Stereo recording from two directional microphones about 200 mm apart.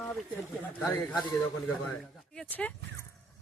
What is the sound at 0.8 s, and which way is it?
Speech, centre (ahead or behind).